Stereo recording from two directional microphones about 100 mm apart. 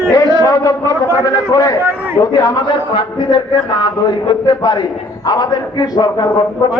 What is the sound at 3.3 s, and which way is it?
A man's voice, 50° left (ahead or behind).